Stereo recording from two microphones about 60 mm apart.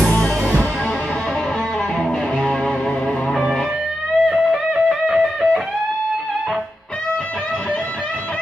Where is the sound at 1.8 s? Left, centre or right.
Centre.